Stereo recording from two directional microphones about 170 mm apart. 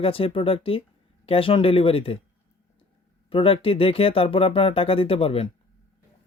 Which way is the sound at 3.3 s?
35° left (ahead or behind).